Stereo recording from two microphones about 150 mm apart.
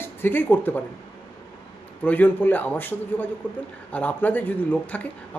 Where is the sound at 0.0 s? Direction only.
15° left (ahead or behind).